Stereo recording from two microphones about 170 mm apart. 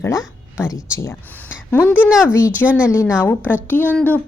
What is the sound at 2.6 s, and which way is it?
Speech, 5° right (ahead or behind).